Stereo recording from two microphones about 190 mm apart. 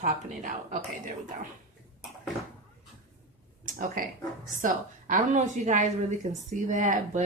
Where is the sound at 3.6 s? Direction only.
45° right (ahead or behind).